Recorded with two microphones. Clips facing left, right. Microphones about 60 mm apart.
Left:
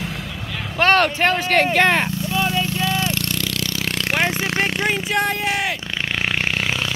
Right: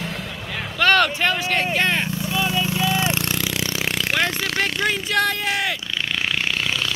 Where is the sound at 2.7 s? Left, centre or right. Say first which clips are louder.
Right 1 dB; centre.